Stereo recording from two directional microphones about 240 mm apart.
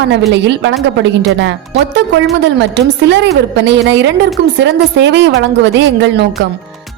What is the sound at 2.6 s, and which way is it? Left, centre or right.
A woman's voice, right.